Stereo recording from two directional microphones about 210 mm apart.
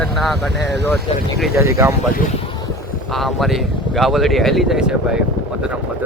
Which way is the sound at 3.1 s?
Centre (ahead or behind).